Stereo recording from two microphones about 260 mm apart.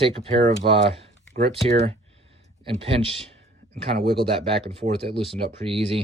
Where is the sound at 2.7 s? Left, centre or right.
Right.